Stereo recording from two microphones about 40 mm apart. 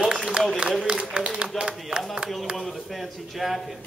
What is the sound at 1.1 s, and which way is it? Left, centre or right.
Speech, right.